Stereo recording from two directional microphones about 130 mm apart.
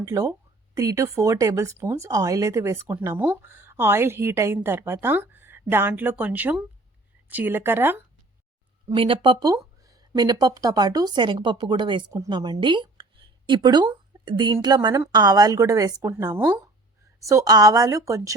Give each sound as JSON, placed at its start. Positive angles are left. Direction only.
{"t": 0.0, "sound": "a woman's voice", "side_deg": -25}
{"t": 9.0, "sound": "a woman's voice", "side_deg": -40}